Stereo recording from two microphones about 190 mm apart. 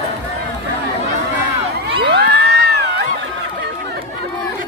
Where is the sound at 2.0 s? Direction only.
60° right (ahead or behind).